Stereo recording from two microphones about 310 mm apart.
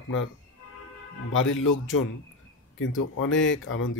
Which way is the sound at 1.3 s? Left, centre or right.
Left.